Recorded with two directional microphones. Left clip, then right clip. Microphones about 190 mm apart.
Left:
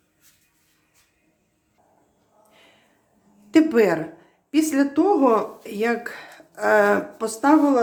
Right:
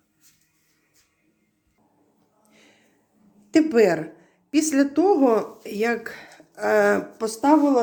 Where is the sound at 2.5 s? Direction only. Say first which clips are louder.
Left 1 dB; 15° right (ahead or behind).